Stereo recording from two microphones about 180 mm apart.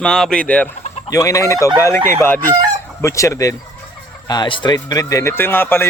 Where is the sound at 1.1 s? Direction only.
15° left (ahead or behind).